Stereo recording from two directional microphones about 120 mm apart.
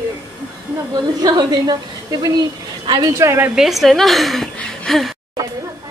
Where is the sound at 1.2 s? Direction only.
35° right (ahead or behind).